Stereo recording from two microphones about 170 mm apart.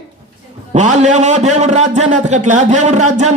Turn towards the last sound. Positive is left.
turn(degrees=-45)  # may be behind; listen again after turning